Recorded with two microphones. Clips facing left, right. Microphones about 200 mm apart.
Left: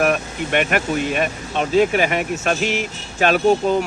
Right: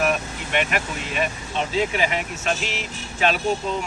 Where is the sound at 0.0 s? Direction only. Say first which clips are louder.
Left 4 dB; 50° left (ahead or behind).